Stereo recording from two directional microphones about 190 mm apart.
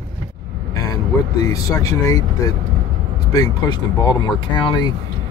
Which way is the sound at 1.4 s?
15° left (ahead or behind).